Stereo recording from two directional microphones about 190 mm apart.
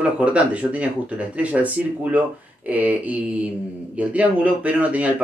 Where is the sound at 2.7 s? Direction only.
10° right (ahead or behind).